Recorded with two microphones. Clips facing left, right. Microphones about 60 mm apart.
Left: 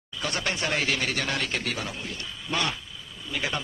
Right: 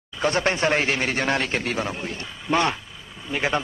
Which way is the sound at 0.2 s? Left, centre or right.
Right.